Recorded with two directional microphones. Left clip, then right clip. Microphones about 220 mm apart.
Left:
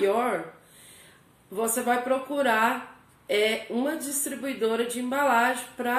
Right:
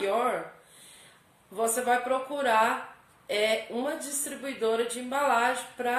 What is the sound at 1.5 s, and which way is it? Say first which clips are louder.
A woman's voice: even; centre (ahead or behind).